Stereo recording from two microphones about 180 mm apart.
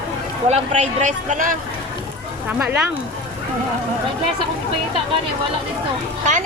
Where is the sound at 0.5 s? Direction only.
40° right (ahead or behind).